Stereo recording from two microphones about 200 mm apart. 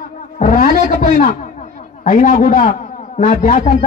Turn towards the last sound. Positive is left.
turn(degrees=40)  # may be behind; listen again after turning